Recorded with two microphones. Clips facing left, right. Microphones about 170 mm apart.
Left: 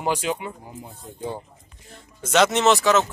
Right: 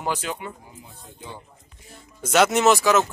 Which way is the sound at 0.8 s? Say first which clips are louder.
Left 10 dB; 40° left (ahead or behind).